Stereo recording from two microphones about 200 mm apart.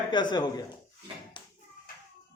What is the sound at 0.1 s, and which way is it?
Speech, 20° left (ahead or behind).